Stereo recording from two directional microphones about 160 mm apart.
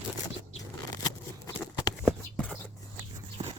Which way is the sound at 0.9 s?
25° left (ahead or behind).